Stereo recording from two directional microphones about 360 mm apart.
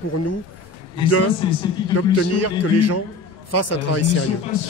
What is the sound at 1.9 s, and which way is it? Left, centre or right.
A man's voice, left.